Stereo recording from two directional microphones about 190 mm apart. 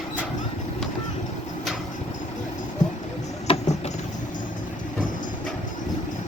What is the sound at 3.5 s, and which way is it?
Vehicle, 30° left (ahead or behind).